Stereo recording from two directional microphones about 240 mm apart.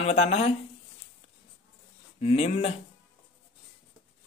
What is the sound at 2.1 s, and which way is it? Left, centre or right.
Speech, left.